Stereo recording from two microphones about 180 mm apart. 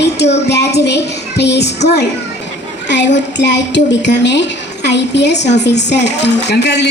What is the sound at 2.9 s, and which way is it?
Speech, 75° left (ahead or behind).